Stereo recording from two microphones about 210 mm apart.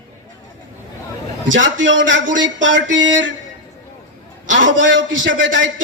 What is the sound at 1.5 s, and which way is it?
Speech, 60° right (ahead or behind).